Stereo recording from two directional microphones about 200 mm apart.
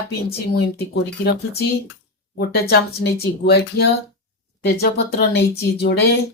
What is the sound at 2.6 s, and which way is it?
A woman's voice, 50° left (ahead or behind).